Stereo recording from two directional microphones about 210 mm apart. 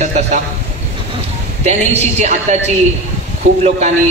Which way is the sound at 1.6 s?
30° right (ahead or behind).